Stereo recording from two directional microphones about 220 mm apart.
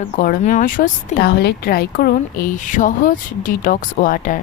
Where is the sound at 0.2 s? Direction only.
35° left (ahead or behind).